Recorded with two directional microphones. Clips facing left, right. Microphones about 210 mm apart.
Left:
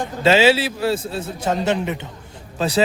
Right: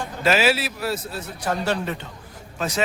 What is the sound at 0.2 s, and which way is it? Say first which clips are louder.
A man's voice: left 5 dB; 25° left (ahead or behind).